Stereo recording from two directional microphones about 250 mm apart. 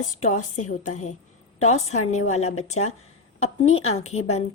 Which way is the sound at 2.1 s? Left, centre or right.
Left.